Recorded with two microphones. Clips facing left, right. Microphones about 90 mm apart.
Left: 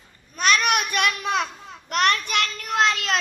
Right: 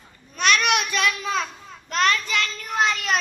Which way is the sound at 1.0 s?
55° left (ahead or behind).